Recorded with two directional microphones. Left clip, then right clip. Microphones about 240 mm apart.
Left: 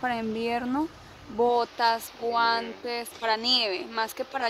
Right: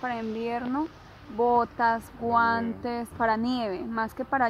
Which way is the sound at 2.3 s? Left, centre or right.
Centre.